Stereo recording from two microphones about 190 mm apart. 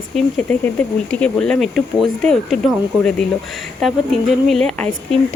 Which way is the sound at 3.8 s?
Centre (ahead or behind).